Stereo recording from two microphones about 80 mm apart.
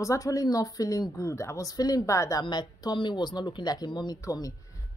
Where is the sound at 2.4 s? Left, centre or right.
Left.